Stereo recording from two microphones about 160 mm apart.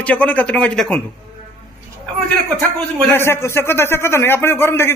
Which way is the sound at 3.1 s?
15° left (ahead or behind).